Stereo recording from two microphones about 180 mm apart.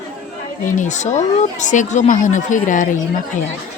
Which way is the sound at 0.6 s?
45° left (ahead or behind).